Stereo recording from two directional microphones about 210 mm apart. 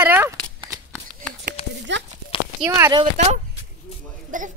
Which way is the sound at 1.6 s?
25° left (ahead or behind).